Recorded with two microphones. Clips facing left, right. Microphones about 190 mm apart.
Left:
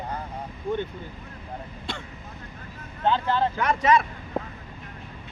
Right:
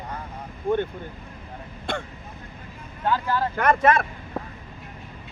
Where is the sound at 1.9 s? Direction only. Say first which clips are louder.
Right 7 dB; 50° right (ahead or behind).